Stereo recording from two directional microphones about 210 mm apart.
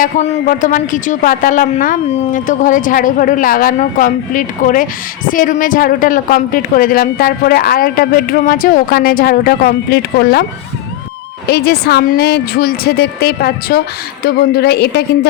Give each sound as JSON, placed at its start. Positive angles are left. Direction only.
{"t": 0.0, "sound": "a man's voice", "side_deg": 40}
{"t": 11.4, "sound": "a woman's voice", "side_deg": 50}